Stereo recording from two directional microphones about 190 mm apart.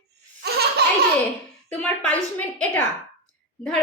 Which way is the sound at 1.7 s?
5° left (ahead or behind).